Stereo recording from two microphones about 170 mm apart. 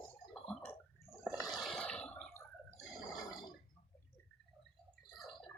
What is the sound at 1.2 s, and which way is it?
Toilet flush, centre (ahead or behind).